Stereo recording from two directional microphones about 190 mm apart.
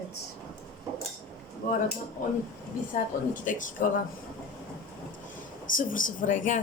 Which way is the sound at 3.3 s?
45° left (ahead or behind).